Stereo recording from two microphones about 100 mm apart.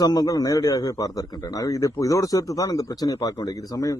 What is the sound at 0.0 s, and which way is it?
A man's voice, 40° left (ahead or behind).